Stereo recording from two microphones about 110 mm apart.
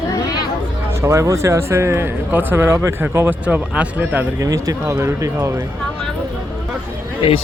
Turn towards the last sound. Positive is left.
turn(degrees=55)  # may be behind; listen again after turning